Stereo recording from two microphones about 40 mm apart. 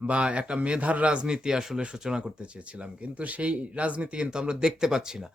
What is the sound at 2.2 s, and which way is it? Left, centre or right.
Speech, right.